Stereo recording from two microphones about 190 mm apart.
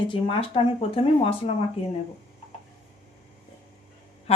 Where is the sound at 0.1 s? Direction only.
25° left (ahead or behind).